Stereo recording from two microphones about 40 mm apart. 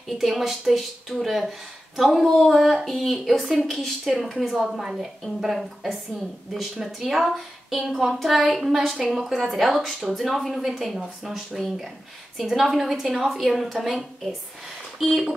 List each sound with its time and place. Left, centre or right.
0.2 s a woman's voice: centre